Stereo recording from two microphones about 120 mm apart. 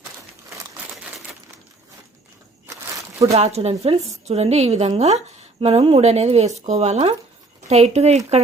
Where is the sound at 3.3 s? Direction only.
60° right (ahead or behind).